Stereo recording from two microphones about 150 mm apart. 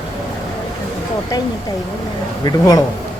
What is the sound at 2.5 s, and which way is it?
Speech, 25° left (ahead or behind).